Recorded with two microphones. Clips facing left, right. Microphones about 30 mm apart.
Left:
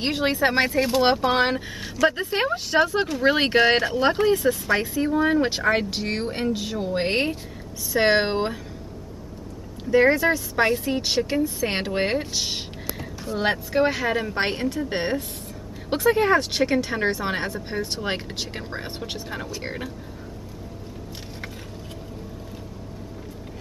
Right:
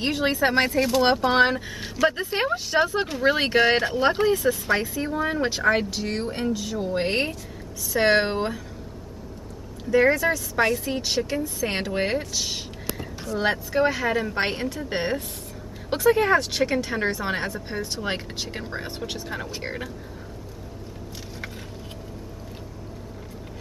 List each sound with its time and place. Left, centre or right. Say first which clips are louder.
0.0 s speech: left 1 dB; centre
5.9 s speech: left 1 dB; left
6.1 s a woman's voice: left 1 dB; centre
9.8 s a woman's voice: left 1 dB; left; by 19.9 s centre